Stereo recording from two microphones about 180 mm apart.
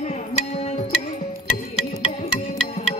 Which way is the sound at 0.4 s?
35° left (ahead or behind).